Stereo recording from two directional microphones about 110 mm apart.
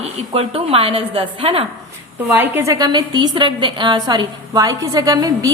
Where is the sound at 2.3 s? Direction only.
20° right (ahead or behind).